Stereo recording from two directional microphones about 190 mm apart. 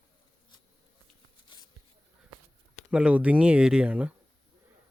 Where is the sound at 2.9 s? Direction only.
5° right (ahead or behind).